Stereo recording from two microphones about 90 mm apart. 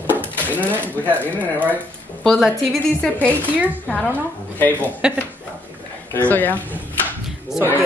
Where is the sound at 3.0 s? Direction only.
15° left (ahead or behind).